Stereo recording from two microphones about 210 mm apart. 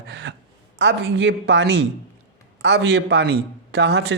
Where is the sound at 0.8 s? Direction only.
60° right (ahead or behind).